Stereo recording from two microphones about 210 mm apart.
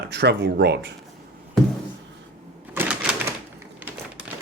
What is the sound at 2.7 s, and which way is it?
Typewriter, 10° right (ahead or behind).